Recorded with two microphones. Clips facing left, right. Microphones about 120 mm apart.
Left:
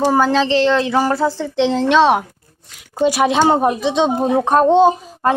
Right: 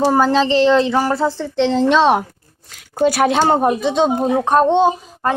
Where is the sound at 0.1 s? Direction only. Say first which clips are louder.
Even; centre (ahead or behind).